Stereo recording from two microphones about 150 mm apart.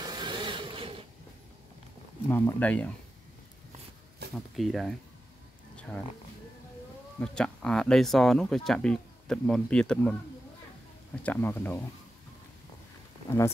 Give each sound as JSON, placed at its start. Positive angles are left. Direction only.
{"t": 0.0, "sound": "printer", "side_deg": -30}
{"t": 2.2, "sound": "speech", "side_deg": 15}
{"t": 4.2, "sound": "a sound", "side_deg": -90}
{"t": 4.6, "sound": "speech", "side_deg": 0}
{"t": 7.2, "sound": "speech", "side_deg": 5}
{"t": 11.2, "sound": "speech", "side_deg": 15}